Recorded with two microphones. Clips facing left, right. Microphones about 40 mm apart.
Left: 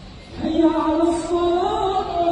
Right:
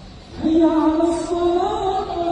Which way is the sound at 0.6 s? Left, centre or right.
Left.